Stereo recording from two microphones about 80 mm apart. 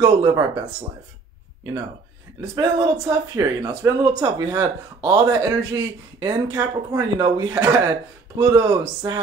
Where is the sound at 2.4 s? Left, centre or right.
Right.